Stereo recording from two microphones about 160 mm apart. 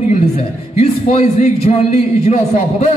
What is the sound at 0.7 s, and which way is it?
A man's voice, 45° left (ahead or behind).